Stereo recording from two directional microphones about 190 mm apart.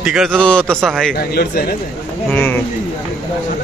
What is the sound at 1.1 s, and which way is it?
Speech, 55° left (ahead or behind).